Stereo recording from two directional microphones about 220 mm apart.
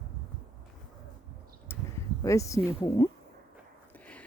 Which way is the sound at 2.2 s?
15° left (ahead or behind).